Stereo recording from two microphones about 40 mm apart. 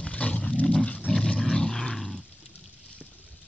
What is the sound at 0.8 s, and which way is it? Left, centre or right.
Dog, left.